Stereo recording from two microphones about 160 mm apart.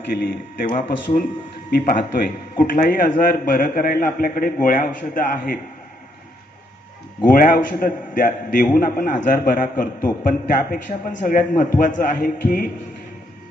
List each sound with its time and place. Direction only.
0.2 s a man's voice: 65° left (ahead or behind)
2.6 s a man's voice: 60° left (ahead or behind)
7.3 s a man's voice: 60° left (ahead or behind)